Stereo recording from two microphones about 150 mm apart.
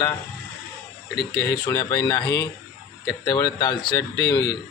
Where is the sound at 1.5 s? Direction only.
20° left (ahead or behind).